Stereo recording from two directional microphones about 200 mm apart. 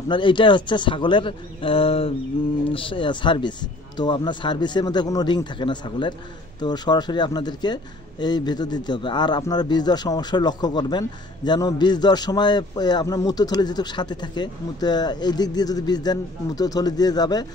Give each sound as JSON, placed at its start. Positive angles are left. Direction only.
{"t": 0.1, "sound": "speech", "side_deg": 25}